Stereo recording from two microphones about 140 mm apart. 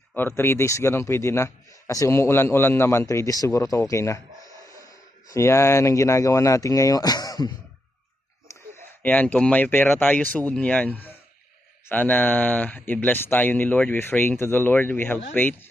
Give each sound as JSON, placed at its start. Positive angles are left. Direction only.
{"t": 0.2, "sound": "a man's voice", "side_deg": 15}
{"t": 5.3, "sound": "a man's voice", "side_deg": 20}
{"t": 9.0, "sound": "speech", "side_deg": 10}